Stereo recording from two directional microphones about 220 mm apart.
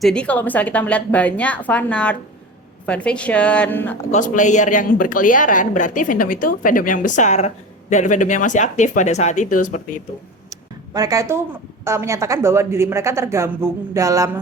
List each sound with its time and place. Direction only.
0.0 s a woman's voice: 5° left (ahead or behind)
4.1 s speech: 35° left (ahead or behind)
10.5 s a sound: 15° right (ahead or behind)
11.9 s a woman's voice: 15° right (ahead or behind)